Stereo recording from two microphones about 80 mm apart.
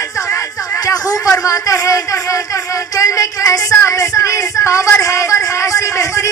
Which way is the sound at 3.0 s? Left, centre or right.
Left.